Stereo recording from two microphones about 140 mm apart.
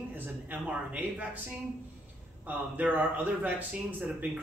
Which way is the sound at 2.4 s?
10° right (ahead or behind).